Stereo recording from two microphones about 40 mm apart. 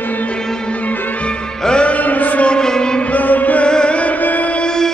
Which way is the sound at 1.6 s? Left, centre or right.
Left.